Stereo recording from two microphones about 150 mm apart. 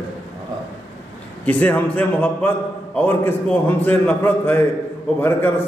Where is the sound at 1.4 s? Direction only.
10° left (ahead or behind).